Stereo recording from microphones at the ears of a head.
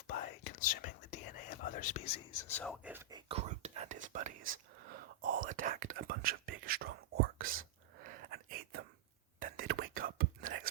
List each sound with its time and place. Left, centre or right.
0.1 s whispering: left
3.2 s whispering: right